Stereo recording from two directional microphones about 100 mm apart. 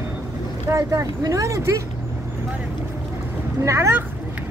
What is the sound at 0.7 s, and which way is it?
Speech, 30° right (ahead or behind).